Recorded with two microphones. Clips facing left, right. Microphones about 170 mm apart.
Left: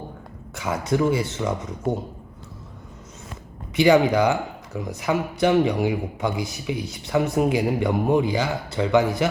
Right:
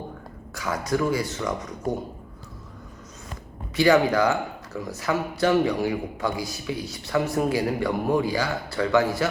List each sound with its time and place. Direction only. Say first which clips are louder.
0.5 s speech: left 2 dB; 25° left (ahead or behind)
3.8 s speech: left 2 dB; 20° left (ahead or behind)